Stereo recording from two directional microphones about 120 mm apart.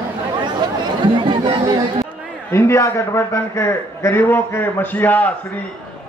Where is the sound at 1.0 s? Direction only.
45° right (ahead or behind).